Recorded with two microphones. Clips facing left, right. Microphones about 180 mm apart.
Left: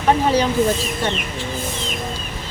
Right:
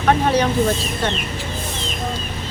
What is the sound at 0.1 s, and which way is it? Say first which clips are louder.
Speech: even; 10° left (ahead or behind).